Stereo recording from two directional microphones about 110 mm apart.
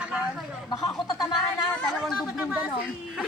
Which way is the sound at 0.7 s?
35° left (ahead or behind).